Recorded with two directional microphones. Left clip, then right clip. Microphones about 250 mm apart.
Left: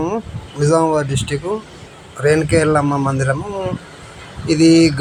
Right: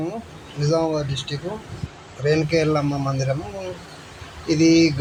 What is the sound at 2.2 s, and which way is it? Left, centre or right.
Speech, centre.